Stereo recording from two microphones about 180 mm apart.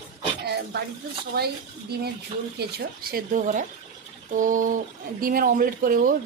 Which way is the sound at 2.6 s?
60° right (ahead or behind).